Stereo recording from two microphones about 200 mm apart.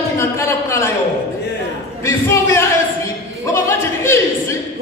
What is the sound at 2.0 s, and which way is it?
Speech, 15° left (ahead or behind).